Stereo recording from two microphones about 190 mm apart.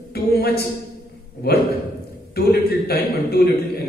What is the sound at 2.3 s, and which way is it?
A man's voice, 55° left (ahead or behind).